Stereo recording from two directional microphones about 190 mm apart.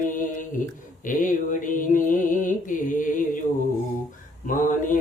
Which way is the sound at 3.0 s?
45° left (ahead or behind).